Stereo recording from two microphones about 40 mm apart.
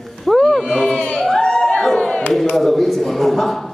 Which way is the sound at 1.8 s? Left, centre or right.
Centre.